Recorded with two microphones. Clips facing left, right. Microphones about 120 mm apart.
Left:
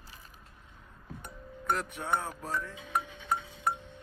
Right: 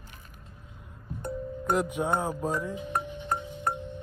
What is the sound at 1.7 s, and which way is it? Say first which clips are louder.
Speech: right 5 dB; 15° right (ahead or behind).